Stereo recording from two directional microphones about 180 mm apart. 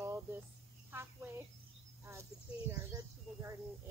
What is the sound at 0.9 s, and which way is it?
Speech, 10° right (ahead or behind).